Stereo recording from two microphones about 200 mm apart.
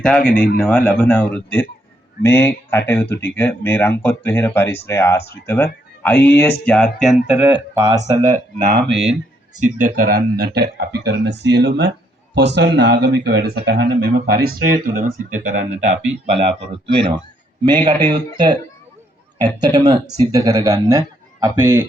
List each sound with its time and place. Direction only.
0.0 s speech: 5° left (ahead or behind)
7.8 s speech: 15° right (ahead or behind)
8.3 s a man's voice: 50° right (ahead or behind); by 16.6 s 30° right (ahead or behind)
17.7 s speech: 20° right (ahead or behind)